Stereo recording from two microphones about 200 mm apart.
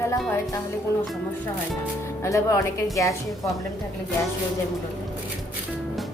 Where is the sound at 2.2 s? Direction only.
15° left (ahead or behind).